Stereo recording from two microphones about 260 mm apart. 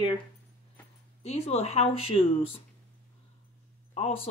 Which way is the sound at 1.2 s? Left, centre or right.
Left.